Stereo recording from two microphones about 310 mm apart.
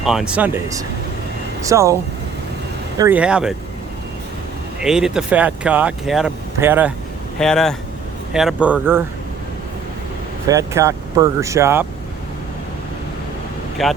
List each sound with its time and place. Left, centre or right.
0.0 s speech: centre
3.0 s speech: centre
4.8 s speech: centre
10.5 s speech: centre
13.8 s speech: centre